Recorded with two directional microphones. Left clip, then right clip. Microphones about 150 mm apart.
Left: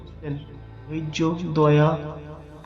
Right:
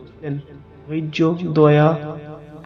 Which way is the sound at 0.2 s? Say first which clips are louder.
Right 5 dB; 20° right (ahead or behind).